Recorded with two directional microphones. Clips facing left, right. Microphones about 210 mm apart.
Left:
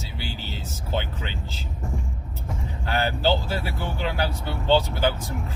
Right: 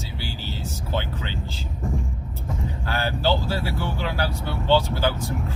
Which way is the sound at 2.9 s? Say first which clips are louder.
Left 1 dB; 20° left (ahead or behind).